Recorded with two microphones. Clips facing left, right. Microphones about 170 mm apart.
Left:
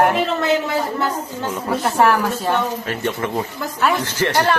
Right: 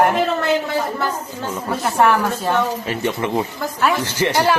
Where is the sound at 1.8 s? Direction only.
Centre (ahead or behind).